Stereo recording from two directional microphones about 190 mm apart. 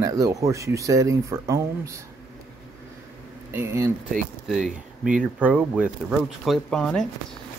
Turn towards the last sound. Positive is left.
turn(degrees=5)  # may be behind; listen again after turning